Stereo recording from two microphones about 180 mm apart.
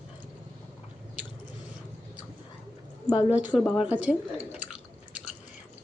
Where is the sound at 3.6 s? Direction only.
5° right (ahead or behind).